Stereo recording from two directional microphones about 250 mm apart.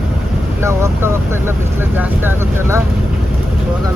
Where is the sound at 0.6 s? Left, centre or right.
Centre.